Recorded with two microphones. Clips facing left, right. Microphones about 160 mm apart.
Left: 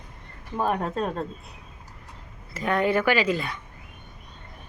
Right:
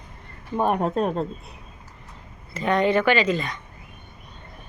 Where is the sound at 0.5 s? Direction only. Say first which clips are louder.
Right 4 dB; 20° right (ahead or behind).